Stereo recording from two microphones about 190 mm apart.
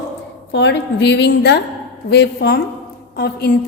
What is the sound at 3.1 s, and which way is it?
Speech, 55° left (ahead or behind).